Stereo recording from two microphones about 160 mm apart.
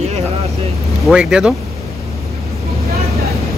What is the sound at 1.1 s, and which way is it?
Speech, 5° right (ahead or behind).